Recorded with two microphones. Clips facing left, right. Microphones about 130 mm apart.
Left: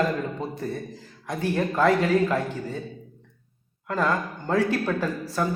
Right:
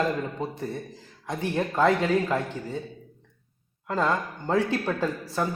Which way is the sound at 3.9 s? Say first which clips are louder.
Left 1 dB; 25° right (ahead or behind).